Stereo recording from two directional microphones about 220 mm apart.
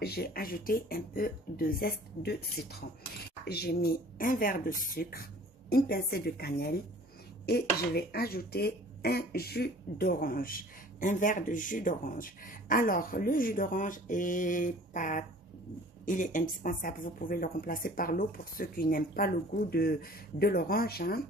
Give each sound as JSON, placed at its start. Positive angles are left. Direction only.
{"t": 0.0, "sound": "a woman's voice", "side_deg": 45}